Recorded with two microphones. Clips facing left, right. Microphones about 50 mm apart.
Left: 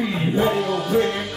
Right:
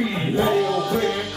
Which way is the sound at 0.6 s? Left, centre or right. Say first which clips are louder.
Right 2 dB; centre.